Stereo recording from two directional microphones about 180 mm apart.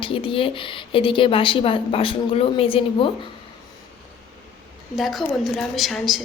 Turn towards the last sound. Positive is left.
turn(degrees=0)  # may be behind; listen again after turning